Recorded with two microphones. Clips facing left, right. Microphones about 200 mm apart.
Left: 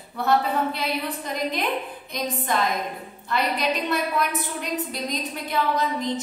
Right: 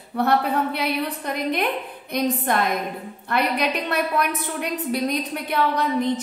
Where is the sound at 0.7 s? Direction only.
60° right (ahead or behind).